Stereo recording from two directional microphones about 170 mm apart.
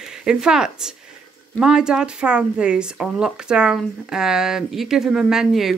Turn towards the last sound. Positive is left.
turn(degrees=0)  # may be behind; listen again after turning